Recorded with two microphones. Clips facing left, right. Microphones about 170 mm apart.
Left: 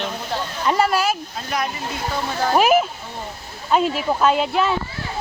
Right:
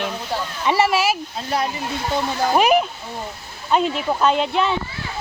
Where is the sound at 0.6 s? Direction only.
5° right (ahead or behind).